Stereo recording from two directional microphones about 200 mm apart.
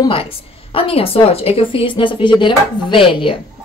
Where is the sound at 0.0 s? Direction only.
25° left (ahead or behind).